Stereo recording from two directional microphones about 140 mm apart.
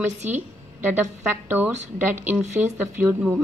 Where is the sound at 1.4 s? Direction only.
15° right (ahead or behind).